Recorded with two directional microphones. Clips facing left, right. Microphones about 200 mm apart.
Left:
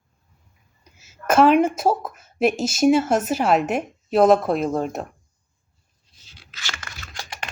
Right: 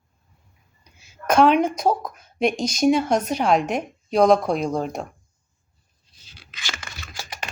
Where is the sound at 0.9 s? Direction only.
5° left (ahead or behind).